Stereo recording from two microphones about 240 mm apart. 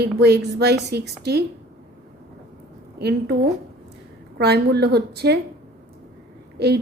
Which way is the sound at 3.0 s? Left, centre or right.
Right.